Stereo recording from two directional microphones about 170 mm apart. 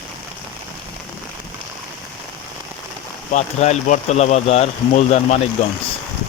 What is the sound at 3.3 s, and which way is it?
Speech, 40° left (ahead or behind).